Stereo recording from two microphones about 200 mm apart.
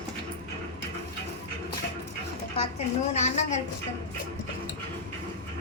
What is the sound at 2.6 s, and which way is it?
A woman's voice, 35° left (ahead or behind).